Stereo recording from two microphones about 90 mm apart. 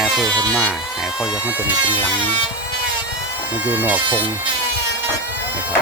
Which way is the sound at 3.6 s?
20° right (ahead or behind).